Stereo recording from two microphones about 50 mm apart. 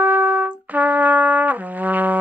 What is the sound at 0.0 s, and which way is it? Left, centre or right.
Trumpet, right.